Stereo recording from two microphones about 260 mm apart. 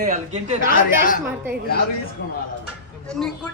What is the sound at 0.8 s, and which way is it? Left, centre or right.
Speech, left.